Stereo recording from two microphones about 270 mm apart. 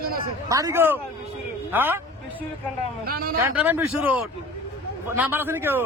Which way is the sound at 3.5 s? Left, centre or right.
Centre.